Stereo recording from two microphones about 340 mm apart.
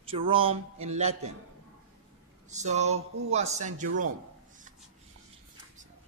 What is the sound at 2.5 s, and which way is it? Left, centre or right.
Speech, centre.